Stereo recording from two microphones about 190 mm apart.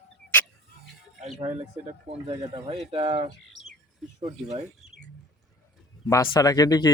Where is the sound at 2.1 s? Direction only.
25° right (ahead or behind).